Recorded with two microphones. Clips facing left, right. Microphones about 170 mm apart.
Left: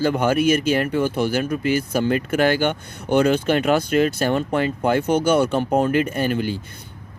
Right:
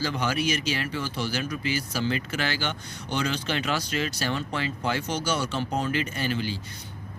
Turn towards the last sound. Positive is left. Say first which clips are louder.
# left 7 dB
turn(degrees=50)  # may be behind; listen again after turning